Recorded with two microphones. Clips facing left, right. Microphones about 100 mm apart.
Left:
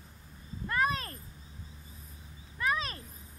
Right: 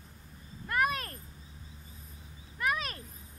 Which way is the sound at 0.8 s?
30° left (ahead or behind).